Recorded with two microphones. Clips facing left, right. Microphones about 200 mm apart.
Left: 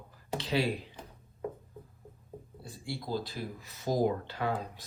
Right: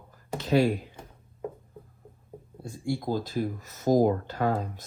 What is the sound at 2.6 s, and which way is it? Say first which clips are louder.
Speech: right 9 dB; 50° right (ahead or behind).